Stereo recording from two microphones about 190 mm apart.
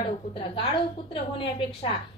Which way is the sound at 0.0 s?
30° left (ahead or behind).